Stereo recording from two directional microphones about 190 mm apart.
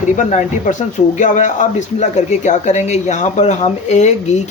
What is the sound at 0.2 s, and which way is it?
Speech, 40° left (ahead or behind).